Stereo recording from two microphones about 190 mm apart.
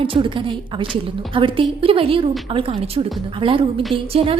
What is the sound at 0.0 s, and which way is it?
A woman's voice, 25° right (ahead or behind).